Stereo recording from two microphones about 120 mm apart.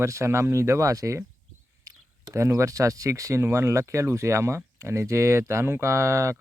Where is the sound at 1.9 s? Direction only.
25° right (ahead or behind).